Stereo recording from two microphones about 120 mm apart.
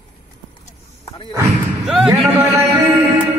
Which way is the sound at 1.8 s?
Centre (ahead or behind).